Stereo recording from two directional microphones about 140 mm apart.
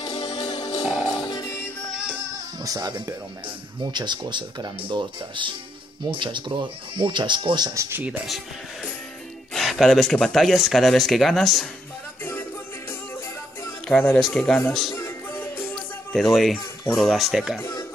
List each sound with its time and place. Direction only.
0.0 s music: 30° left (ahead or behind)
0.8 s music: 5° right (ahead or behind)
1.2 s music: 25° left (ahead or behind)
1.9 s music: 5° right (ahead or behind)
2.6 s speech: 25° right (ahead or behind)
9.5 s speech: centre (ahead or behind)
12.2 s music: 15° left (ahead or behind)
13.8 s speech: 10° left (ahead or behind)
15.0 s music: 15° left (ahead or behind)
16.1 s speech: centre (ahead or behind)
17.6 s speech: 20° left (ahead or behind)